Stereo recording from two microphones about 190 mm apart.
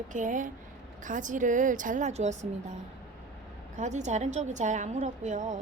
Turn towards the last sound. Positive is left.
turn(degrees=-40)  # may be behind; listen again after turning